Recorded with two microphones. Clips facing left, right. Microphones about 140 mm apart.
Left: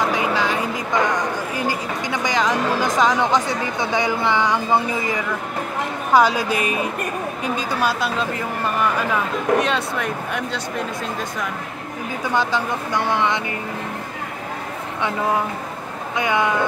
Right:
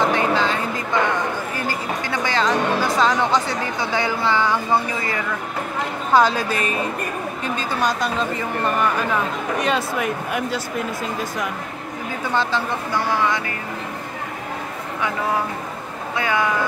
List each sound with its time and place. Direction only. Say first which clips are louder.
0.0 s a sound: right 2 dB; 10° left (ahead or behind)
1.7 s speech: left 1 dB; 15° left (ahead or behind)
6.1 s speech: left 1 dB; 10° left (ahead or behind)
9.6 s speech: even; 5° right (ahead or behind)
12.4 s speech: left 1 dB; 15° left (ahead or behind)
16.2 s speech: left 1 dB; 20° left (ahead or behind)